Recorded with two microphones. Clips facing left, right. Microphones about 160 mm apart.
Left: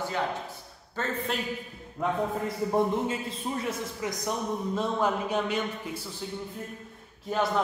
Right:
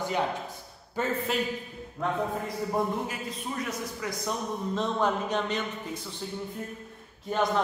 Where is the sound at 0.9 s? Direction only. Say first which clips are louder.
Right 2 dB; 5° right (ahead or behind).